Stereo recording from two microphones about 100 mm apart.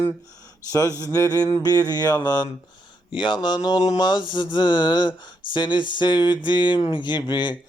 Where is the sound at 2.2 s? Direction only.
45° left (ahead or behind).